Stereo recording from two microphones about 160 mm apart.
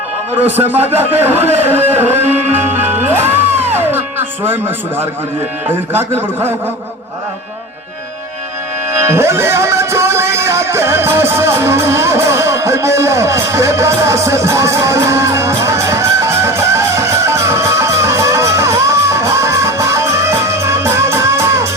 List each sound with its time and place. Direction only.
0.4 s a man's voice: 10° right (ahead or behind)
2.3 s music: 10° right (ahead or behind)
5.9 s a man's voice: 15° right (ahead or behind)
9.0 s music: 15° right (ahead or behind)